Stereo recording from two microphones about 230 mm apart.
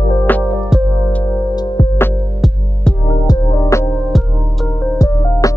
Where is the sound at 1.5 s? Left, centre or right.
Centre.